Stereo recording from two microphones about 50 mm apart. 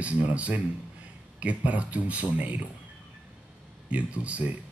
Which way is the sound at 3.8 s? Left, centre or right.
Right.